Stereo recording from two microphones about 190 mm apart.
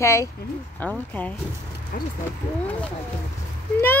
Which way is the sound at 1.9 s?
50° left (ahead or behind).